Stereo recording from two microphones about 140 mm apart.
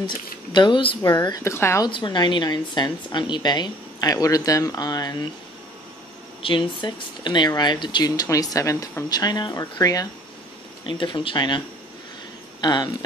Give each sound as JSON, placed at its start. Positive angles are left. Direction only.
{"t": 0.0, "sound": "a woman's voice", "side_deg": 35}
{"t": 1.4, "sound": "speech", "side_deg": 20}
{"t": 1.9, "sound": "a woman's voice", "side_deg": 35}
{"t": 6.4, "sound": "speech", "side_deg": 35}
{"t": 10.9, "sound": "a woman's voice", "side_deg": 35}